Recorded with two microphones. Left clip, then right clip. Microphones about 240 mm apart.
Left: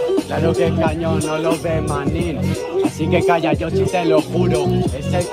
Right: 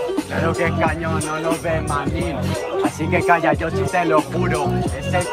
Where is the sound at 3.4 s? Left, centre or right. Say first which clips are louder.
Left 1 dB; centre.